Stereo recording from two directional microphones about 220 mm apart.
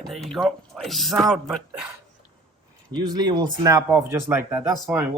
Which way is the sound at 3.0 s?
20° right (ahead or behind).